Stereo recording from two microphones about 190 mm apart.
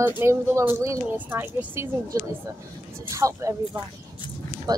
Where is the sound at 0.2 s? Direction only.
15° right (ahead or behind).